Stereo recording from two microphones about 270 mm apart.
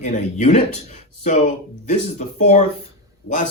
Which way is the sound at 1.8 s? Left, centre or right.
Left.